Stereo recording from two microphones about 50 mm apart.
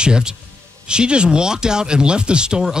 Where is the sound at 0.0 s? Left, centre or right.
Centre.